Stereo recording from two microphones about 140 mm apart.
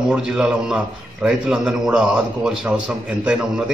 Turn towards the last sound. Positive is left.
turn(degrees=-5)  # may be behind; listen again after turning